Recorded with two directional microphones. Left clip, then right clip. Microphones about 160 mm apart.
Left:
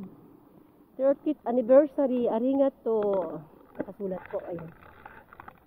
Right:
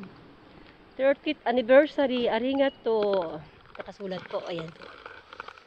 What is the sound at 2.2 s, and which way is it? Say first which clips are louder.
Speech: left 1 dB; 45° left (ahead or behind).